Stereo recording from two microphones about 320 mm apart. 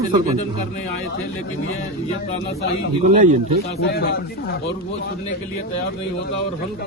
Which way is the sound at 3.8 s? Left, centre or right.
Left.